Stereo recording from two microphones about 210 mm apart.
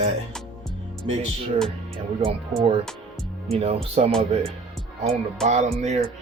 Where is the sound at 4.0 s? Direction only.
30° right (ahead or behind).